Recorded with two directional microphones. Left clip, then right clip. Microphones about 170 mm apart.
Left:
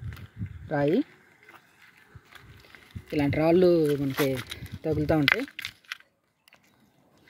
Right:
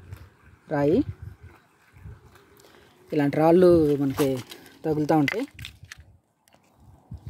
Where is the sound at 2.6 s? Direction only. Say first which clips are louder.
Left 2 dB; 15° right (ahead or behind).